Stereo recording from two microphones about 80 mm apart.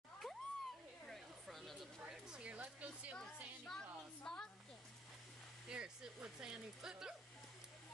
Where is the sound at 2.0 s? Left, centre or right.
Centre.